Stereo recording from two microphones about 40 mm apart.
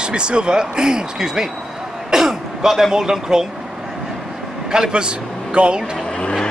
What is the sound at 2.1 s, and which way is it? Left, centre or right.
Throat clearing, centre.